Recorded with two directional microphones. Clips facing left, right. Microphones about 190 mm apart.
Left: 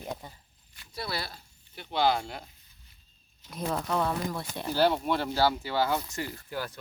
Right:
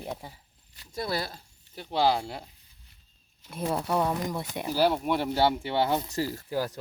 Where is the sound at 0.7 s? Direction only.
40° right (ahead or behind).